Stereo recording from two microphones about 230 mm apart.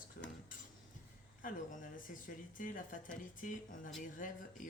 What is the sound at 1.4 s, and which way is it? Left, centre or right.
Speech, left.